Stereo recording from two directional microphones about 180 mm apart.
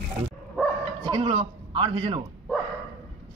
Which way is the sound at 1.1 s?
30° right (ahead or behind).